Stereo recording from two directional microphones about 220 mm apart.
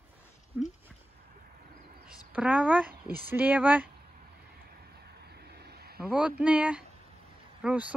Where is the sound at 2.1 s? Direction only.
5° right (ahead or behind).